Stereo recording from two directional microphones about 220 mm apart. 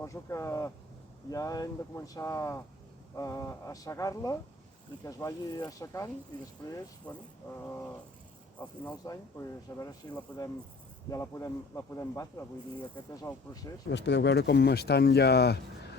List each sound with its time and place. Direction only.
0.0 s speech: 15° left (ahead or behind)
8.5 s speech: 5° left (ahead or behind)
13.9 s speech: 50° left (ahead or behind)